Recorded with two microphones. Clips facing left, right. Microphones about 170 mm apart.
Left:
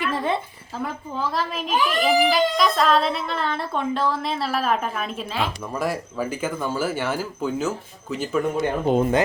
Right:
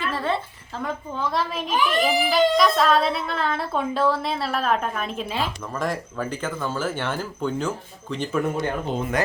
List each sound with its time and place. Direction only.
0.0 s a sound: 15° left (ahead or behind)
0.8 s a child's voice: 5° left (ahead or behind)
8.9 s speech: 55° left (ahead or behind)